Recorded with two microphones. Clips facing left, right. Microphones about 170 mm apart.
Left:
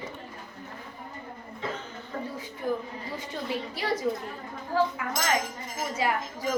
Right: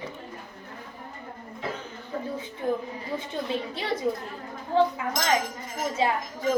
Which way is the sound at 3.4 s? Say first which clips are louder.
Left 1 dB; 25° right (ahead or behind).